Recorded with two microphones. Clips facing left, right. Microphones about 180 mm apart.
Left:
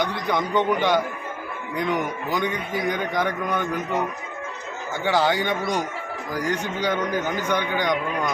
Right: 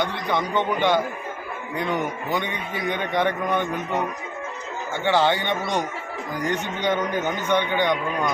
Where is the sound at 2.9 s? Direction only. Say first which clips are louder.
Right 3 dB; 10° left (ahead or behind).